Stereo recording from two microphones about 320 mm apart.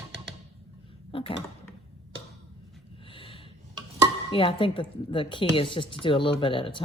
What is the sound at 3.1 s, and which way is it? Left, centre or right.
Snort, centre.